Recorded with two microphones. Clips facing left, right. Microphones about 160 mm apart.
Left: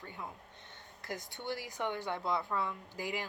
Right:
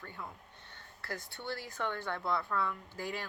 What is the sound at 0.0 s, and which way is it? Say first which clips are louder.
Speech: left 1 dB; 20° left (ahead or behind).